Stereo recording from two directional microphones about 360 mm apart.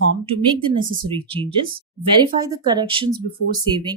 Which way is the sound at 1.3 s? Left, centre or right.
Centre.